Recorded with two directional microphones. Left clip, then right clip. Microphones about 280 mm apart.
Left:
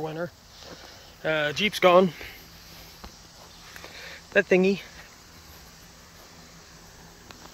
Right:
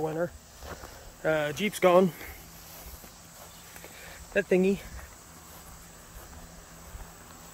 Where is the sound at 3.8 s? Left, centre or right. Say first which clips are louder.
Left 6 dB; centre.